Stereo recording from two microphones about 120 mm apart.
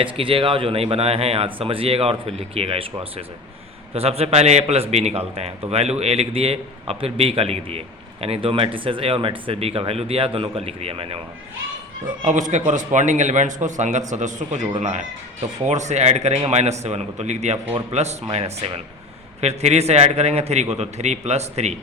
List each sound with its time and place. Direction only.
0.0 s a man's voice: 45° right (ahead or behind)
12.2 s a man's voice: 85° right
14.8 s a man's voice: 75° right (ahead or behind)